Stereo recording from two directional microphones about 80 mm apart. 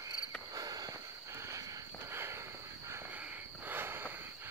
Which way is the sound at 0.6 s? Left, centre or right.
Right.